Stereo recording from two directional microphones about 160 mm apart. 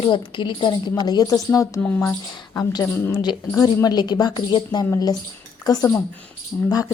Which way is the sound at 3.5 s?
20° left (ahead or behind).